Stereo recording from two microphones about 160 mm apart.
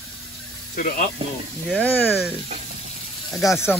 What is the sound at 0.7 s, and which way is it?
Speech, 55° left (ahead or behind).